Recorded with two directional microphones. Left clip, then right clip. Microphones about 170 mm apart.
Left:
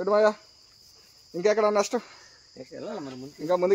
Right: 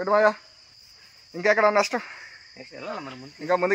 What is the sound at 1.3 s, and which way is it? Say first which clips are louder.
Speech: right 3 dB; 10° right (ahead or behind).